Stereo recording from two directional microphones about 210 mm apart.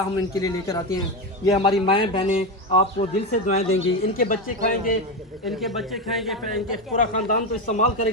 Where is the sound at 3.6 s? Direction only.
65° left (ahead or behind).